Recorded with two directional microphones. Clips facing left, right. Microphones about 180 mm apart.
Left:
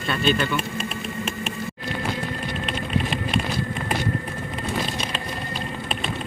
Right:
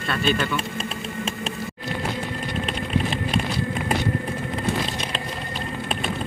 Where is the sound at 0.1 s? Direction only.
5° right (ahead or behind).